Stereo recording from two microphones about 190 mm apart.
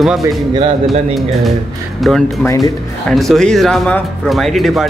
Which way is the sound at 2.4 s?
20° left (ahead or behind).